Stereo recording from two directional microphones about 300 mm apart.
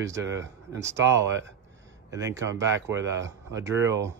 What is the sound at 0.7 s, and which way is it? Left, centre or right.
A man's voice, right.